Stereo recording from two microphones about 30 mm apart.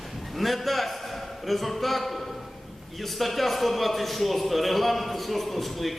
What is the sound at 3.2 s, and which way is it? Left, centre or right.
A man's voice, centre.